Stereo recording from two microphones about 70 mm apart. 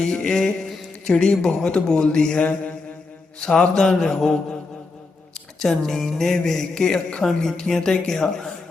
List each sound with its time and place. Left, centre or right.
0.0 s speech: centre
5.5 s speech: centre